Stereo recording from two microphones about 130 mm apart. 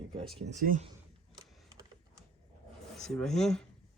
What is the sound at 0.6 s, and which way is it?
Speech, 90° right.